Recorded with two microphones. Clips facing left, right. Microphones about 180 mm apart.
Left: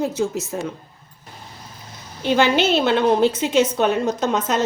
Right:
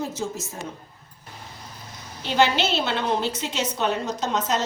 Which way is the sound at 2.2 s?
55° left (ahead or behind).